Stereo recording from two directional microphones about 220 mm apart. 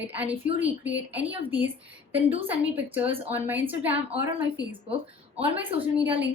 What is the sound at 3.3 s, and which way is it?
A woman's voice, 10° right (ahead or behind).